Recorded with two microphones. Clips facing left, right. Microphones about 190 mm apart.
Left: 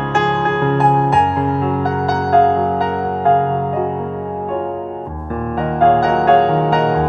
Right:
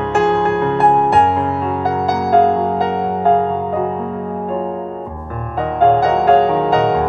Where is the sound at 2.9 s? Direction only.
20° right (ahead or behind).